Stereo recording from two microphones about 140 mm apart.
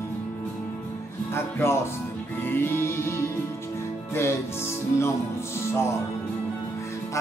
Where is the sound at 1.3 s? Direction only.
15° left (ahead or behind).